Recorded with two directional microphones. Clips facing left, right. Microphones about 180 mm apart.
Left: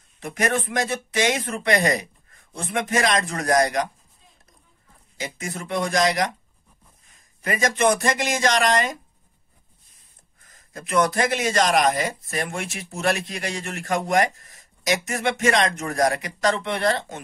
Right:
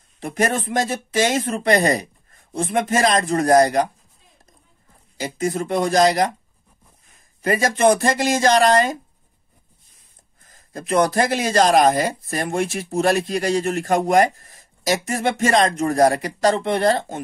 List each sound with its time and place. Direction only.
0.2 s speech: 35° right (ahead or behind)
5.2 s speech: 35° right (ahead or behind)
7.4 s speech: 35° right (ahead or behind)
10.5 s speech: 35° right (ahead or behind)